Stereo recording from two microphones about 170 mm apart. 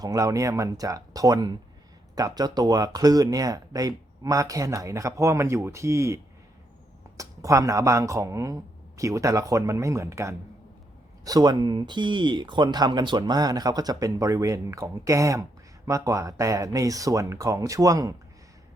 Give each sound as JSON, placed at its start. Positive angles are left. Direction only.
{"t": 0.0, "sound": "speech", "side_deg": -20}
{"t": 7.2, "sound": "speech", "side_deg": -20}